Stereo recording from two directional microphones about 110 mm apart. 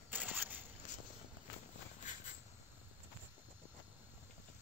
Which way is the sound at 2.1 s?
90° left.